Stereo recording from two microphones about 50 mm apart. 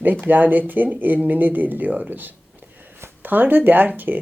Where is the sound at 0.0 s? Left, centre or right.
Right.